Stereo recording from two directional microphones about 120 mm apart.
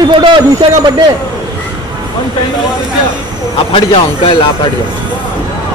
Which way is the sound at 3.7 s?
50° left (ahead or behind).